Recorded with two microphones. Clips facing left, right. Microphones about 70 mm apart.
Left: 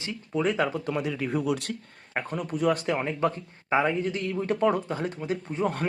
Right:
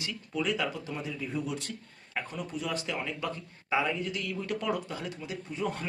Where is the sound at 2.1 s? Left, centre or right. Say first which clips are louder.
Left 6 dB; left.